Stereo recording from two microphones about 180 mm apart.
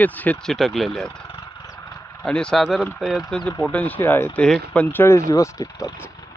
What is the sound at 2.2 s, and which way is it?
Speech, 5° left (ahead or behind).